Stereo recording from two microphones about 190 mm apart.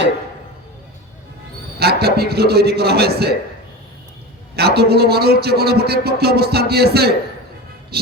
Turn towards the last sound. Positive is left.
turn(degrees=-55)  # may be behind; listen again after turning